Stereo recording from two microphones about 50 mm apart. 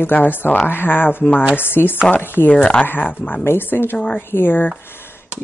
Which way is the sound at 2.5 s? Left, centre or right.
Left.